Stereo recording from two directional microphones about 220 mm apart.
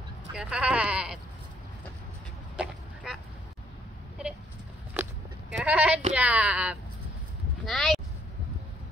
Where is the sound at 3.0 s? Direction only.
Centre (ahead or behind).